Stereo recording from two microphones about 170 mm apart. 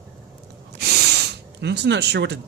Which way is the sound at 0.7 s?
70° right (ahead or behind).